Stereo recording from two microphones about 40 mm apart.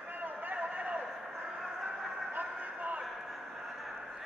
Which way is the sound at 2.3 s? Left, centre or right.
Right.